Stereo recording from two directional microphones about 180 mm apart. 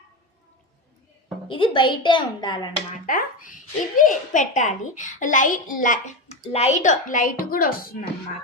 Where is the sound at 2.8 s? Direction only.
50° left (ahead or behind).